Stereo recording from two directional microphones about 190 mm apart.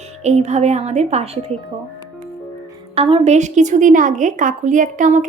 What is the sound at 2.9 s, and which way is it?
A woman's voice, 30° right (ahead or behind).